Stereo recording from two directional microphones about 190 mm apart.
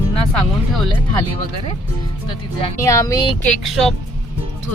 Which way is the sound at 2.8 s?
15° left (ahead or behind).